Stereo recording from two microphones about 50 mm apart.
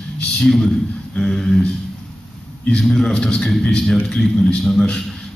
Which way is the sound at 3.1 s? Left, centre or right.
Centre.